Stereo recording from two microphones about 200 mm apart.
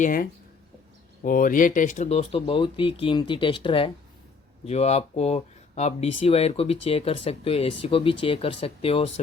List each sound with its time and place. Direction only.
0.0 s speech: 45° left (ahead or behind); by 9.0 s 30° left (ahead or behind)